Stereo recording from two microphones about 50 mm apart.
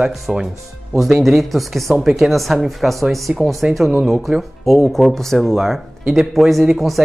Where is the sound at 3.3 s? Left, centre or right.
Right.